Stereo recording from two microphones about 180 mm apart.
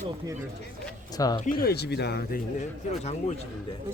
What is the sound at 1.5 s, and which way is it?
Speech, 55° left (ahead or behind).